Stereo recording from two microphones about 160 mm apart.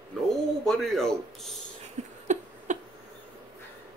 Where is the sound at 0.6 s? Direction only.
Centre (ahead or behind).